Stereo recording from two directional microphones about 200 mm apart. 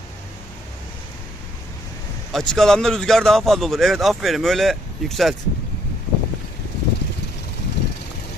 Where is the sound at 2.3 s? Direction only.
Centre (ahead or behind).